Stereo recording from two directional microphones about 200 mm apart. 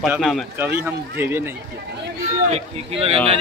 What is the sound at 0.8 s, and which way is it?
Speech, 10° right (ahead or behind).